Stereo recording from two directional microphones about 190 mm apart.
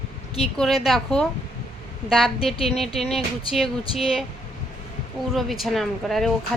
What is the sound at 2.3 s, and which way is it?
Speech, 30° left (ahead or behind).